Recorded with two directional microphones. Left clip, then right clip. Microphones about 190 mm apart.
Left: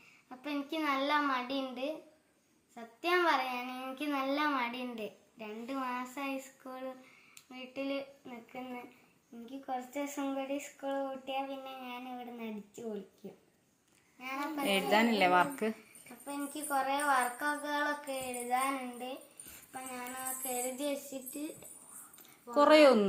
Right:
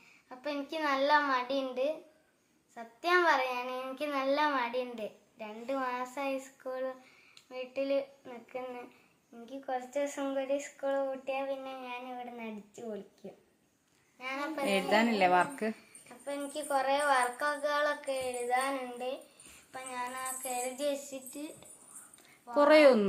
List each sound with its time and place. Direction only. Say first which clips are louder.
0.3 s a child's voice: right 2 dB; 15° right (ahead or behind)
7.5 s speech: right 6 dB; 10° right (ahead or behind)
9.5 s speech: right 3 dB; 15° right (ahead or behind)
19.7 s music: right 4 dB; 20° right (ahead or behind)
22.4 s speech: right 1 dB; 15° right (ahead or behind)